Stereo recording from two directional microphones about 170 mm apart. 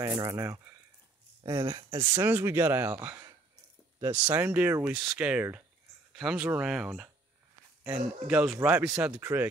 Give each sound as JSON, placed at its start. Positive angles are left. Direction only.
{"t": 0.0, "sound": "speech", "side_deg": -20}
{"t": 2.1, "sound": "speech", "side_deg": -10}